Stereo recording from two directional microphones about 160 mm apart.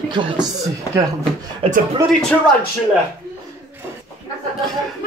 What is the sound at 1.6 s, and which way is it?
Speech, 35° right (ahead or behind).